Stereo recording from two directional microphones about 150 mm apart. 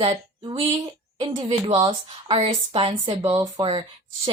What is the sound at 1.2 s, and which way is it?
Speech, 30° right (ahead or behind).